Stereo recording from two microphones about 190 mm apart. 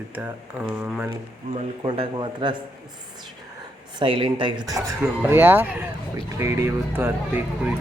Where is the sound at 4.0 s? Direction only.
25° right (ahead or behind).